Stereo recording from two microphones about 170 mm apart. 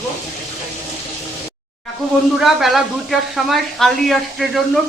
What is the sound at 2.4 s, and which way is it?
A man's voice, centre (ahead or behind).